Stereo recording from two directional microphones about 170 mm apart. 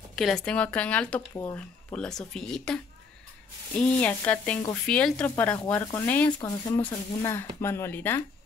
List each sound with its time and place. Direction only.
0.1 s sizzle: centre (ahead or behind)
1.3 s speech: 15° left (ahead or behind)
2.0 s speech: 5° left (ahead or behind)
3.7 s sizzle: 5° left (ahead or behind)